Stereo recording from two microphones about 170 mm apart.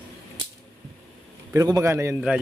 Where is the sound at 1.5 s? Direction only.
20° right (ahead or behind).